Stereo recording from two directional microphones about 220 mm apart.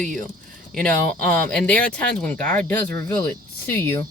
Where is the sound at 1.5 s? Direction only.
5° left (ahead or behind).